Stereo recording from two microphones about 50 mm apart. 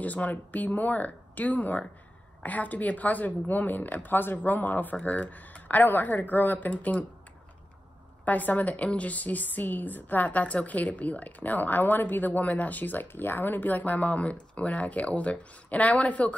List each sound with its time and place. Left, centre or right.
0.0 s a woman's voice: left
8.3 s a woman's voice: left